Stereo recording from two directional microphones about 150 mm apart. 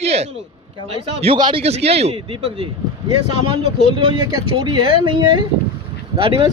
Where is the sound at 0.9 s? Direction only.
40° right (ahead or behind).